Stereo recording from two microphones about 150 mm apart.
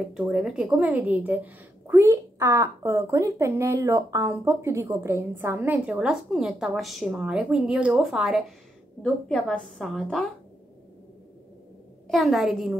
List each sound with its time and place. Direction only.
0.1 s a woman's voice: 5° right (ahead or behind)
12.1 s a woman's voice: centre (ahead or behind)